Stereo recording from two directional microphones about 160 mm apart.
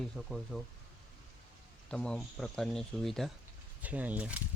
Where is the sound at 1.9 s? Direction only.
5° left (ahead or behind).